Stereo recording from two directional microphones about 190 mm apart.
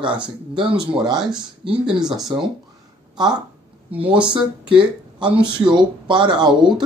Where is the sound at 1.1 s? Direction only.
5° right (ahead or behind).